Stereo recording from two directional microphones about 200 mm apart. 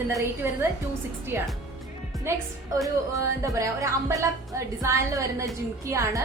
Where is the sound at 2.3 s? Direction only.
15° right (ahead or behind).